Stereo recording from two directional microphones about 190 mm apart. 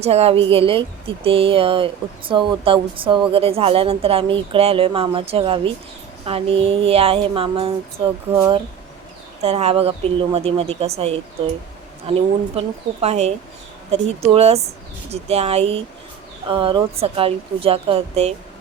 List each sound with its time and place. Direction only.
0.0 s speech: 35° right (ahead or behind)